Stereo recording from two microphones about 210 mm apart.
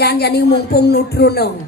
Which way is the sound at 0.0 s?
50° left (ahead or behind).